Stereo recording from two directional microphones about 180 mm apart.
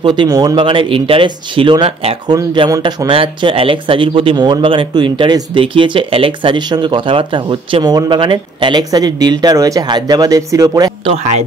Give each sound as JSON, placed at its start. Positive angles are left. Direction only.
{"t": 0.0, "sound": "speech", "side_deg": -25}
{"t": 2.3, "sound": "speech", "side_deg": -20}
{"t": 11.1, "sound": "speech", "side_deg": -35}